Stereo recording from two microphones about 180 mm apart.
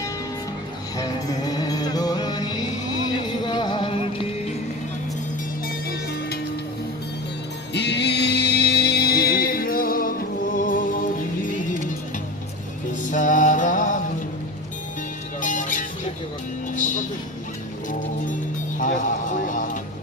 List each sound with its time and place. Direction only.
0.9 s music: 20° left (ahead or behind)
5.9 s music: 60° left (ahead or behind)
7.7 s music: 70° left (ahead or behind); by 11.8 s 50° left (ahead or behind)
13.1 s music: 45° left (ahead or behind)
15.4 s music: 45° left (ahead or behind)
18.8 s a sound: 45° left (ahead or behind)